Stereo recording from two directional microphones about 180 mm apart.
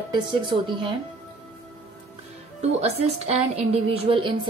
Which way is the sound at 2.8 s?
35° right (ahead or behind).